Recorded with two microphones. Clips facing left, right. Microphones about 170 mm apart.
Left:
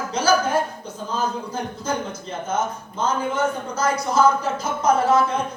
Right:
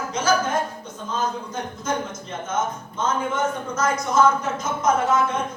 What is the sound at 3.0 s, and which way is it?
Speech, 30° left (ahead or behind).